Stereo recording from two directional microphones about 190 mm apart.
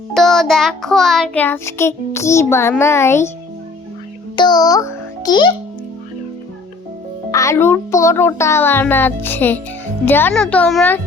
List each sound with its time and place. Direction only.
0.1 s child singing: centre (ahead or behind)
4.4 s a child's voice: 20° left (ahead or behind)
7.3 s child singing: 15° left (ahead or behind)